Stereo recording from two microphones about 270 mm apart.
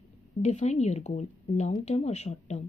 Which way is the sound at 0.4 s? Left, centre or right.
Left.